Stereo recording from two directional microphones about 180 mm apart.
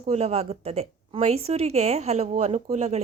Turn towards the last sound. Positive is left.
turn(degrees=-35)  # may be behind; listen again after turning